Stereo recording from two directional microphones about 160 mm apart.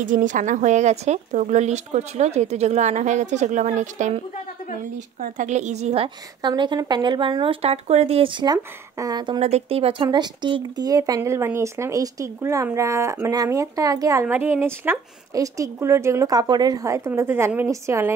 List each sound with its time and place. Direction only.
0.0 s speech: 55° right (ahead or behind)
5.2 s speech: 50° right (ahead or behind)
6.0 s speech: 30° right (ahead or behind)
9.4 s speech: 40° right (ahead or behind)
10.0 s speech: 25° right (ahead or behind)